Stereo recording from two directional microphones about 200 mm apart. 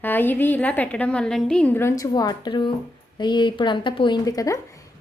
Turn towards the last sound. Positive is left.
turn(degrees=15)  # may be behind; listen again after turning